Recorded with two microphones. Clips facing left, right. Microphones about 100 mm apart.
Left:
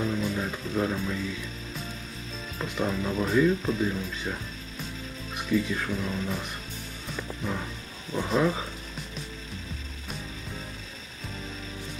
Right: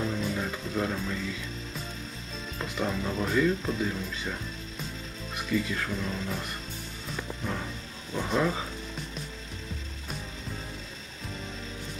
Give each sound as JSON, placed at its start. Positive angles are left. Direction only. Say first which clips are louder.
{"t": 0.0, "sound": "music", "louder": "left 2 dB", "side_deg": 0}
{"t": 2.6, "sound": "speech", "louder": "left 2 dB", "side_deg": 0}
{"t": 5.5, "sound": "speech", "louder": "left 3 dB", "side_deg": 5}
{"t": 8.1, "sound": "speech", "louder": "left 2 dB", "side_deg": 5}